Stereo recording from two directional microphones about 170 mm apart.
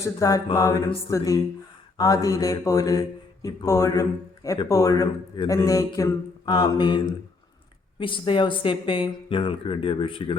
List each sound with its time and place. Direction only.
0.0 s mantra: 20° left (ahead or behind)
7.9 s speech: 30° left (ahead or behind)